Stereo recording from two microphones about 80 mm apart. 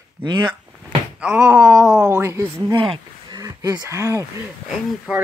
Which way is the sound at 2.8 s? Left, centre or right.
Right.